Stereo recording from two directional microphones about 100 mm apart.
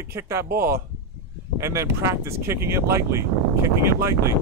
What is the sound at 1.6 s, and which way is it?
Speech, 30° right (ahead or behind).